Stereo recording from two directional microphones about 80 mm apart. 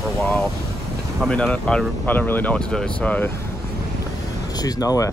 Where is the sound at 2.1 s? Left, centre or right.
Left.